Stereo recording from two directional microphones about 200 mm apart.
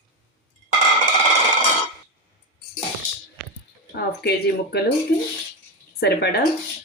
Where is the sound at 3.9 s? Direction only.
55° left (ahead or behind).